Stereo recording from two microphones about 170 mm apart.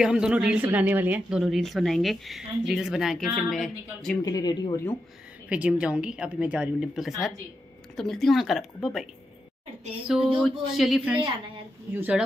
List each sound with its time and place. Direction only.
0.0 s a woman's voice: 5° right (ahead or behind)
4.2 s speech: 20° left (ahead or behind)
5.5 s a woman's voice: 5° right (ahead or behind)
10.0 s a woman's voice: centre (ahead or behind)
11.9 s a woman's voice: 10° right (ahead or behind)